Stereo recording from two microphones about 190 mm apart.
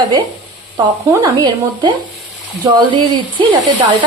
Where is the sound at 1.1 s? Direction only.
20° right (ahead or behind).